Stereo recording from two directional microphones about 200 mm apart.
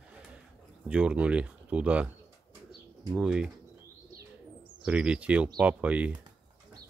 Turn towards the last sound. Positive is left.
turn(degrees=-5)  # may be behind; listen again after turning